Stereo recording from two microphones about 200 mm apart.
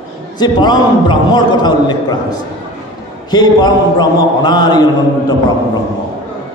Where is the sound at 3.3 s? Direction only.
20° left (ahead or behind).